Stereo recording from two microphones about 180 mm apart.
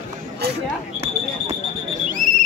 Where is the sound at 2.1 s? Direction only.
50° right (ahead or behind).